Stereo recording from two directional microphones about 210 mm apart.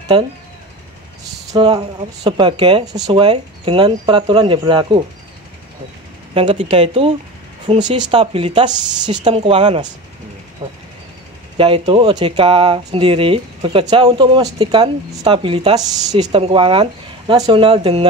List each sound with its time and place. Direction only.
0.1 s speech: 25° right (ahead or behind)
1.5 s speech: 20° right (ahead or behind)
6.3 s speech: 25° right (ahead or behind)